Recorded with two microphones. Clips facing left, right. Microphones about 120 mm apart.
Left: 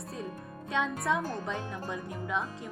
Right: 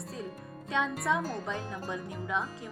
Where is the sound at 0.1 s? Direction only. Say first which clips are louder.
Left 3 dB; centre (ahead or behind).